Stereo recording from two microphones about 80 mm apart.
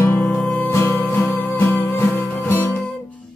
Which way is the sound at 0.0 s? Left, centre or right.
Left.